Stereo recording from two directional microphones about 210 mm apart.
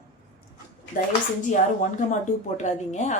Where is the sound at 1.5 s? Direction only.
35° left (ahead or behind).